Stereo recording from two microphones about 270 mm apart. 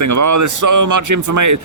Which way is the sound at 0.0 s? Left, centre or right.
Right.